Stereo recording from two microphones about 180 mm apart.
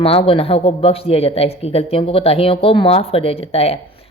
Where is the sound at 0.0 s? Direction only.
30° left (ahead or behind).